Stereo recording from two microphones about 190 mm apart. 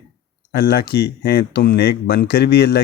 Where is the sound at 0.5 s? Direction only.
60° left (ahead or behind).